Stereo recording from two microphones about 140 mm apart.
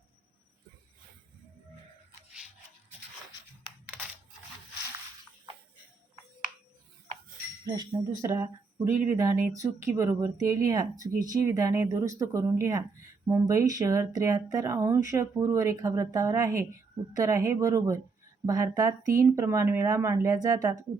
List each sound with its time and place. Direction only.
7.6 s speech: 30° right (ahead or behind)
8.2 s speech: 20° right (ahead or behind)